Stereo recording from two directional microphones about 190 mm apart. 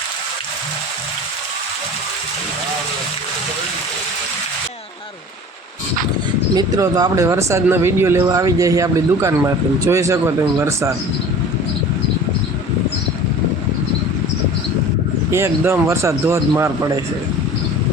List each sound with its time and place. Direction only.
6.5 s speech: 20° right (ahead or behind)
15.3 s speech: 15° right (ahead or behind)